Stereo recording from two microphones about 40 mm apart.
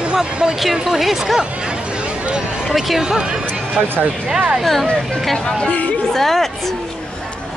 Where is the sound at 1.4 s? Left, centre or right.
Right.